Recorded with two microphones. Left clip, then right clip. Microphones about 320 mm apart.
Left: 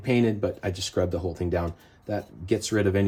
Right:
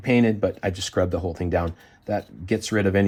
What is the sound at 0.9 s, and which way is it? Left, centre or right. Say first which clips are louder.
Speech: right 2 dB; right.